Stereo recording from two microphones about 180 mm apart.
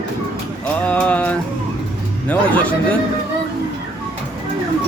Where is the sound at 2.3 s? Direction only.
10° left (ahead or behind).